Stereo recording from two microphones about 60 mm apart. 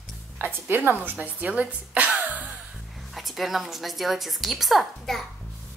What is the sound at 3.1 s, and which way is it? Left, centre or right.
A woman's voice, centre.